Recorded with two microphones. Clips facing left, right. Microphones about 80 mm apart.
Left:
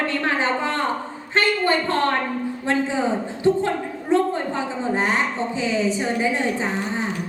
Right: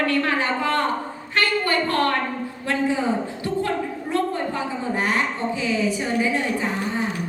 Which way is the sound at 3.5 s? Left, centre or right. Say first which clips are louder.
Left 9 dB; left.